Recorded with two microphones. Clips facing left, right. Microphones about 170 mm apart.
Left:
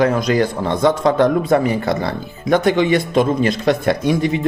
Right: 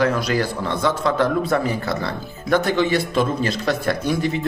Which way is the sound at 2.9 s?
55° left (ahead or behind).